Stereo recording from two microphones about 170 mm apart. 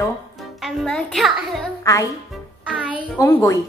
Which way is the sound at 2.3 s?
5° right (ahead or behind).